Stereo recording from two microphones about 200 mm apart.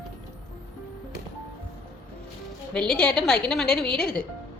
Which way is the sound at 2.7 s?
5° left (ahead or behind).